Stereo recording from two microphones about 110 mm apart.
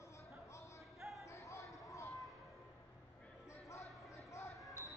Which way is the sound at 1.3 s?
30° left (ahead or behind).